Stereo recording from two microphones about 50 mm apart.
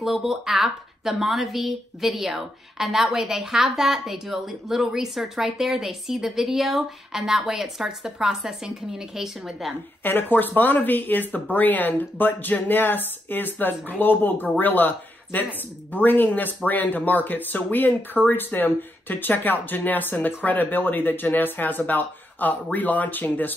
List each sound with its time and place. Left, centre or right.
0.0 s speech: centre
10.0 s speech: left